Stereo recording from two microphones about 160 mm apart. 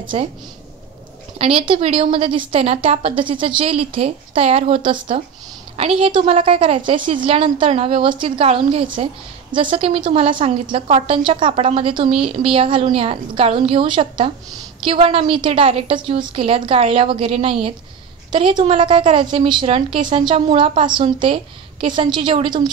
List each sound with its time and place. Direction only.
0.1 s a woman's voice: 40° right (ahead or behind)
1.4 s a woman's voice: 35° right (ahead or behind)